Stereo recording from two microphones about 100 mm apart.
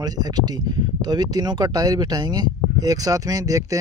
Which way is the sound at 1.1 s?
40° right (ahead or behind).